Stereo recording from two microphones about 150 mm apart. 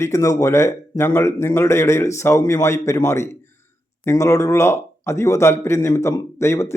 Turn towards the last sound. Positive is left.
turn(degrees=20)  # may be behind; listen again after turning